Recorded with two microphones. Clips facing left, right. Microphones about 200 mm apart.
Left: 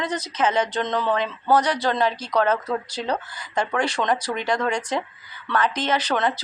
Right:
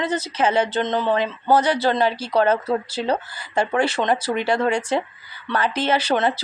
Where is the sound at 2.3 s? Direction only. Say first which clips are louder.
Right 3 dB; 30° right (ahead or behind).